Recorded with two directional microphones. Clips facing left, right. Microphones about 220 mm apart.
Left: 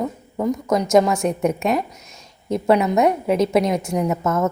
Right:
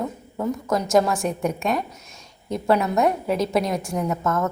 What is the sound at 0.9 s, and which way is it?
A woman's voice, centre (ahead or behind).